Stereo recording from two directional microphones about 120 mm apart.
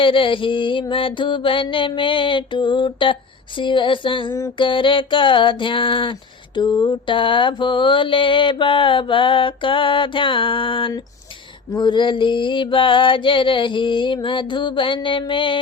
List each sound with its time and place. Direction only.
0.0 s mantra: 45° left (ahead or behind)
4.3 s mantra: 25° left (ahead or behind)
4.5 s mantra: 45° left (ahead or behind)